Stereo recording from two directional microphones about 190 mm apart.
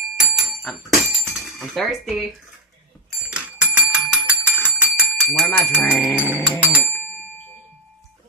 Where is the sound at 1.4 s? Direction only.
Centre (ahead or behind).